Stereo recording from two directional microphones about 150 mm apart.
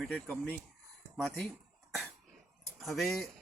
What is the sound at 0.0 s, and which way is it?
A man's voice, 5° left (ahead or behind).